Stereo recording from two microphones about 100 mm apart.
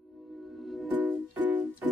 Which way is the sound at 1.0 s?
15° right (ahead or behind).